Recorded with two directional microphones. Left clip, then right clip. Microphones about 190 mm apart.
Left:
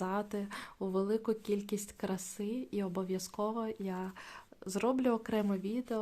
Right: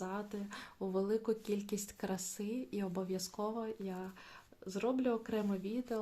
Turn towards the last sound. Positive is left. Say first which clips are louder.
# left 3 dB
turn(degrees=25)  # may be behind; listen again after turning